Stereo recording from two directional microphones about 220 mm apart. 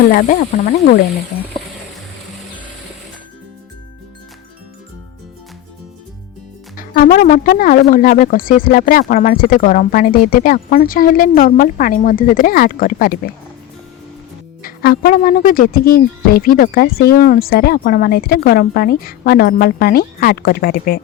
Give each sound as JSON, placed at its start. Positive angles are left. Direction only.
{"t": 0.1, "sound": "speech", "side_deg": 40}
{"t": 6.7, "sound": "speech", "side_deg": 40}
{"t": 14.6, "sound": "speech", "side_deg": 45}